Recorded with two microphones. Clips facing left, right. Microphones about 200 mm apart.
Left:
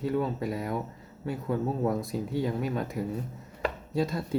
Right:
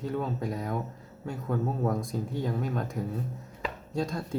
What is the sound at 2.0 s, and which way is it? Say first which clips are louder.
Speech: left 2 dB; 5° left (ahead or behind).